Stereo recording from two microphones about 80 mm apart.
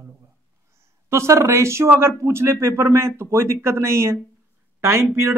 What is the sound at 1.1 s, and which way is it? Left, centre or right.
Speech, right.